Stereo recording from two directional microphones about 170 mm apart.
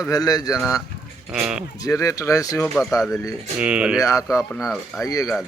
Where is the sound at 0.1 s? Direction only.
20° left (ahead or behind).